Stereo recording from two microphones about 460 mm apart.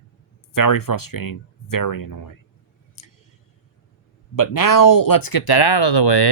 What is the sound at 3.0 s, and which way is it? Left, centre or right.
Vehicle, left.